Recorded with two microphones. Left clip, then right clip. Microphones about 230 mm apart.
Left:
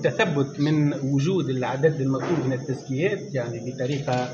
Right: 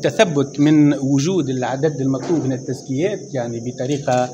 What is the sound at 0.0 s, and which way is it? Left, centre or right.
Speech, right.